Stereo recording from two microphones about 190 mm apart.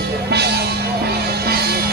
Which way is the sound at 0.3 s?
60° right (ahead or behind).